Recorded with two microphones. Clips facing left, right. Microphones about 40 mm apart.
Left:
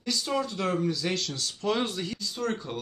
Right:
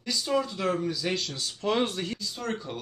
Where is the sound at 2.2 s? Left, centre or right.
Centre.